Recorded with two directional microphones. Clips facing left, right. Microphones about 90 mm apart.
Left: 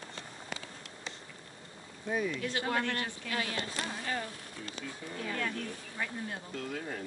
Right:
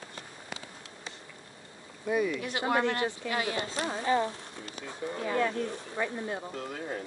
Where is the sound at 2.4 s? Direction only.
20° right (ahead or behind).